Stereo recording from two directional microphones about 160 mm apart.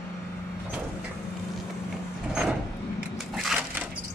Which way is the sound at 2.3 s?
5° right (ahead or behind).